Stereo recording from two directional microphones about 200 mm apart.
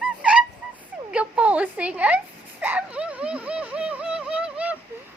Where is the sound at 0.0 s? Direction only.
5° right (ahead or behind).